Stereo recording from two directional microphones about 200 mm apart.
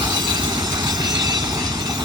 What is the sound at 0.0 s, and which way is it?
Train, 20° right (ahead or behind).